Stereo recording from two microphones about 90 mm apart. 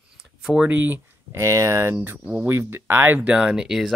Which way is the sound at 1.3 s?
35° right (ahead or behind).